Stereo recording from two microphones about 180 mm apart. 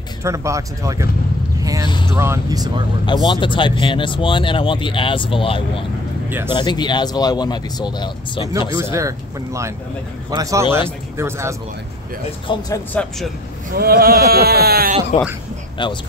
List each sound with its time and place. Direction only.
0.2 s speech: 15° right (ahead or behind)
1.9 s a sound: 25° left (ahead or behind)
2.1 s speech: 15° right (ahead or behind)
3.3 s speech: 25° left (ahead or behind)
6.2 s speech: 10° right (ahead or behind)
6.5 s speech: 25° left (ahead or behind)
8.7 s a man's voice: 15° right (ahead or behind)
12.4 s speech: 20° left (ahead or behind)
13.7 s speech: 60° right (ahead or behind)
15.1 s a man's voice: 35° left (ahead or behind)